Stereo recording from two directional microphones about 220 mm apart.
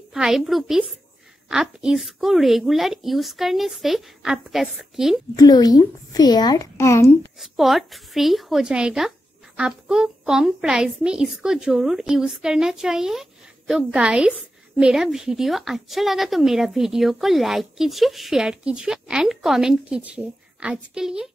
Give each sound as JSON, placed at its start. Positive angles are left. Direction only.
{"t": 0.1, "sound": "a woman's voice", "side_deg": 0}
{"t": 5.3, "sound": "a woman's voice", "side_deg": 15}
{"t": 7.3, "sound": "a woman's voice", "side_deg": 0}